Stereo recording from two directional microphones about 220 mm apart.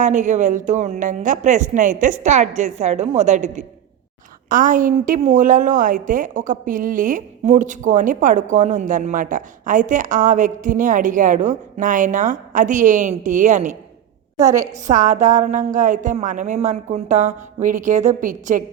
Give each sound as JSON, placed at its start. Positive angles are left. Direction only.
{"t": 0.0, "sound": "a woman's voice", "side_deg": -35}
{"t": 14.3, "sound": "a woman's voice", "side_deg": -15}
{"t": 14.8, "sound": "a woman's voice", "side_deg": -35}